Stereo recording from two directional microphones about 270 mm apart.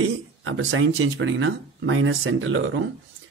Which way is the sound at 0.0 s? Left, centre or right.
Right.